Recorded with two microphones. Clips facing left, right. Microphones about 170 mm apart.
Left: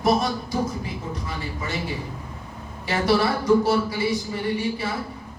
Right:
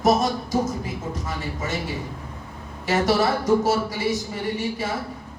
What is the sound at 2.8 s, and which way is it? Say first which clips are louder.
Speech: right 1 dB; 45° right (ahead or behind).